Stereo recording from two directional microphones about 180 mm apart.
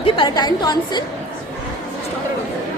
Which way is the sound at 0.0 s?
25° left (ahead or behind).